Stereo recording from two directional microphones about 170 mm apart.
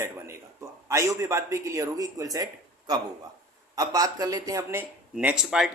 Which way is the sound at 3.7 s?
20° right (ahead or behind).